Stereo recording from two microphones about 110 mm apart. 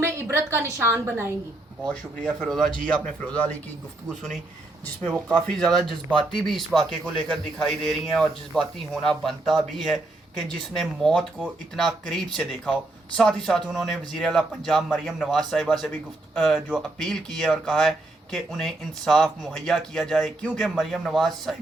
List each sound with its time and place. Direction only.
0.0 s a woman's voice: 20° right (ahead or behind)
1.9 s speech: 5° left (ahead or behind)
5.0 s speech: 10° left (ahead or behind)